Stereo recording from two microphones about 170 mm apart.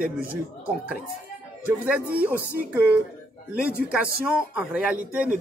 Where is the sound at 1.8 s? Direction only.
10° right (ahead or behind).